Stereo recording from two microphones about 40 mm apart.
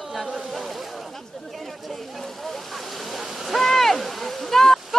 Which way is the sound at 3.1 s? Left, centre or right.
Centre.